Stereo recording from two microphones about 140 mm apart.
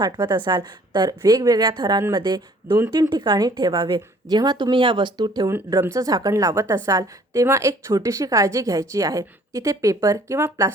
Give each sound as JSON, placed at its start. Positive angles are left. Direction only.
{"t": 0.0, "sound": "a woman's voice", "side_deg": -30}
{"t": 5.5, "sound": "speech", "side_deg": -15}